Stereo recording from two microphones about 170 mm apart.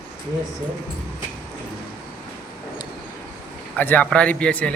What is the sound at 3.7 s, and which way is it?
Speech, 10° left (ahead or behind).